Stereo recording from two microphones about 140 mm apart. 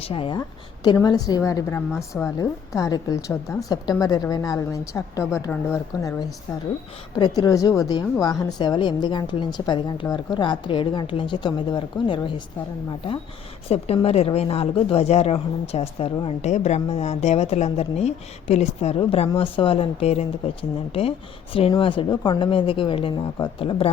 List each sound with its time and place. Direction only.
0.0 s a woman's voice: 40° left (ahead or behind)
0.9 s a woman's voice: 25° left (ahead or behind)
7.2 s a woman's voice: 30° left (ahead or behind)
13.7 s a woman's voice: 45° left (ahead or behind)